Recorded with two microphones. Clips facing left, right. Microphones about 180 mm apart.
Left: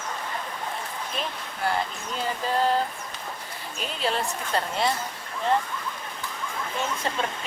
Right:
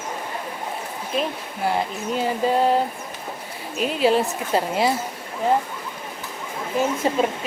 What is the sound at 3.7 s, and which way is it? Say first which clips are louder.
A woman's voice: right 9 dB; 5° right (ahead or behind).